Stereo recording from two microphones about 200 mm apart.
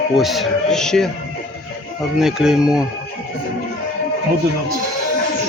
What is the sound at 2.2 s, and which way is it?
Speech, 5° right (ahead or behind).